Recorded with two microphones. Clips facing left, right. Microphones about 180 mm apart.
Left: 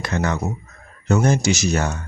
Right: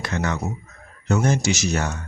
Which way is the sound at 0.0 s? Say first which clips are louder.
Left 3 dB; 40° left (ahead or behind).